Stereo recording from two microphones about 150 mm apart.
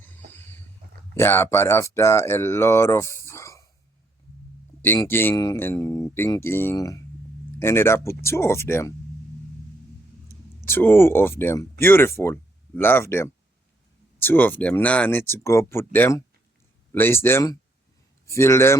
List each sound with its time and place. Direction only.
0.3 s vehicle: 15° left (ahead or behind)
1.1 s speech: 15° left (ahead or behind)
4.9 s speech: 15° left (ahead or behind)
10.7 s speech: 15° left (ahead or behind)